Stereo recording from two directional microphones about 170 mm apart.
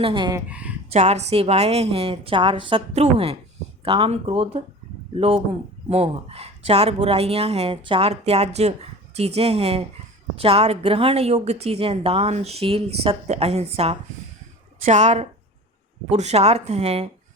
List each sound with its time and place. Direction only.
0.0 s speech: 30° right (ahead or behind)
0.3 s speech: 5° right (ahead or behind)
0.9 s a woman's voice: 40° right (ahead or behind)
5.9 s a woman's voice: 35° right (ahead or behind)